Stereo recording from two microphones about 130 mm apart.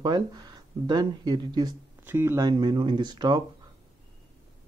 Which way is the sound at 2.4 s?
35° right (ahead or behind).